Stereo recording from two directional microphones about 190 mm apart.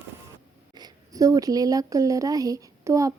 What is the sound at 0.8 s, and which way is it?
Speech, 20° right (ahead or behind).